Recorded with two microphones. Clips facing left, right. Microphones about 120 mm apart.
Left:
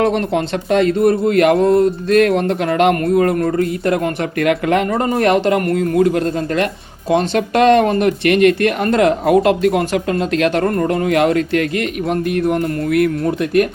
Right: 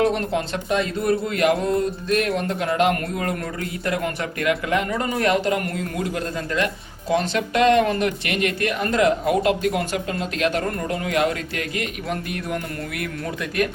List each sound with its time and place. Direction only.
0.0 s speech: 65° left (ahead or behind)
1.6 s music: 65° left (ahead or behind)
3.2 s speech: 50° left (ahead or behind); by 4.9 s 65° left (ahead or behind)
4.9 s speech: 40° left (ahead or behind)
5.2 s speech: 65° left (ahead or behind)
6.2 s speech: 40° left (ahead or behind)
7.3 s speech: 60° left (ahead or behind)
10.7 s speech: 55° left (ahead or behind)
12.5 s speech: 45° left (ahead or behind)